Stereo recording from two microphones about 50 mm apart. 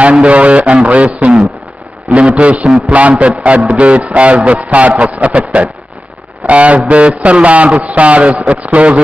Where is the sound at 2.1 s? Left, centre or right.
Right.